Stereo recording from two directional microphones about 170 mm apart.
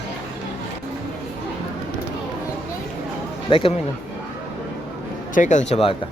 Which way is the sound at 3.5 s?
30° left (ahead or behind).